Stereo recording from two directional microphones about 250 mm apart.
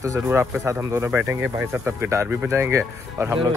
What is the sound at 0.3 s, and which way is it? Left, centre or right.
Speech, centre.